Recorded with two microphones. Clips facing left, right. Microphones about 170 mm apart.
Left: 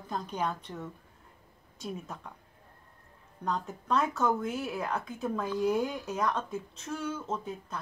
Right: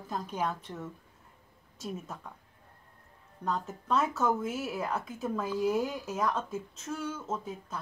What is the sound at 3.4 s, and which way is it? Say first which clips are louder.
Speech: even; centre (ahead or behind).